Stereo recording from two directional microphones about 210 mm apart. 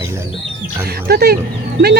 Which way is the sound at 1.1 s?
50° right (ahead or behind).